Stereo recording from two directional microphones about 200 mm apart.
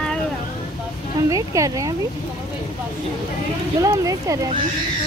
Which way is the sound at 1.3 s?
15° right (ahead or behind).